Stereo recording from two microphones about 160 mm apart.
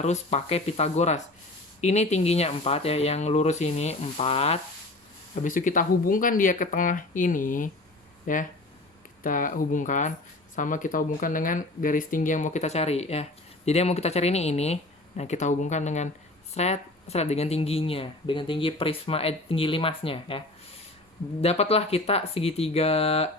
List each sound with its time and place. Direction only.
0.0 s speech: 45° left (ahead or behind)
5.3 s speech: 55° left (ahead or behind); by 20.4 s 35° left (ahead or behind)
21.4 s speech: 40° left (ahead or behind)